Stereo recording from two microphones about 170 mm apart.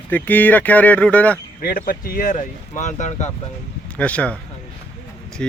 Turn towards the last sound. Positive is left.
turn(degrees=5)  # may be behind; listen again after turning